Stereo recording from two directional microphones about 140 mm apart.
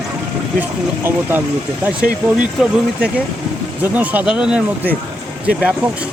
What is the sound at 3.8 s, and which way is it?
Speech, 10° right (ahead or behind).